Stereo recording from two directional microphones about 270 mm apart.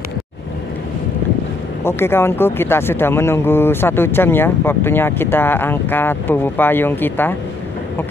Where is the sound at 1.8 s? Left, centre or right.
Centre.